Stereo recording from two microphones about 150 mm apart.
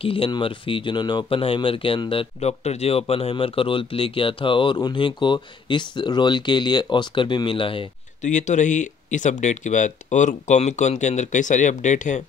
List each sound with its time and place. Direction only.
0.0 s speech: 35° left (ahead or behind)
8.2 s speech: 55° left (ahead or behind)